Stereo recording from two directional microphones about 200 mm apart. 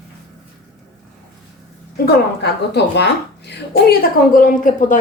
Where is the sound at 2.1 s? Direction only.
55° left (ahead or behind).